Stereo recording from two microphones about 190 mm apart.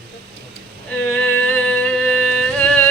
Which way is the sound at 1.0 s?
5° left (ahead or behind).